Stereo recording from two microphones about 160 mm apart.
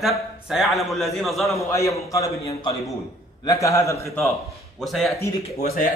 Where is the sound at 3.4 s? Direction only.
20° left (ahead or behind).